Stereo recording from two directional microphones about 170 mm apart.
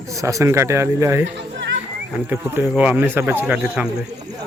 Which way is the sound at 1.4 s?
90° right.